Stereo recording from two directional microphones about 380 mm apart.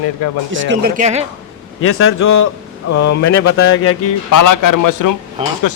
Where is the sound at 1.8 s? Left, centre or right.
Left.